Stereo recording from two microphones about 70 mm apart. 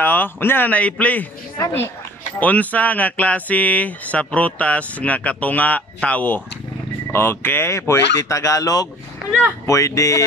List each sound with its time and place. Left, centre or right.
0.0 s speech: left
2.4 s speech: left
7.1 s speech: left